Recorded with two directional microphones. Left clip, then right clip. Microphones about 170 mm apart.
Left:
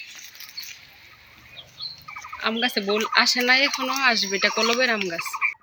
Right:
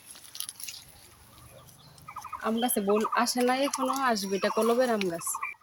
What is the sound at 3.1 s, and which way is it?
Fowl, 20° right (ahead or behind).